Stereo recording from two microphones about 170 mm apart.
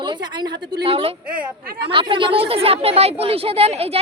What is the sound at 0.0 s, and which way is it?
A woman's voice, 25° right (ahead or behind).